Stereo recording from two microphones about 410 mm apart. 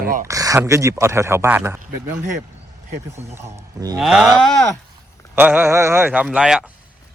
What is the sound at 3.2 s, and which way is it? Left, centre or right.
A man's voice, centre.